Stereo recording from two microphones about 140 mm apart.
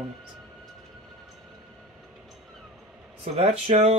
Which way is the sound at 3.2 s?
50° right (ahead or behind).